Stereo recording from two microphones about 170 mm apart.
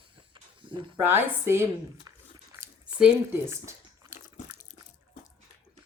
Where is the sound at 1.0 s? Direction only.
15° right (ahead or behind).